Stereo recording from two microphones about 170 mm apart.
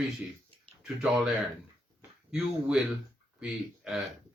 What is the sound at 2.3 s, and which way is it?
A man's voice, 5° right (ahead or behind).